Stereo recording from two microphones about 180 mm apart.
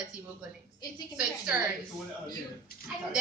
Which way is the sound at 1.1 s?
5° right (ahead or behind).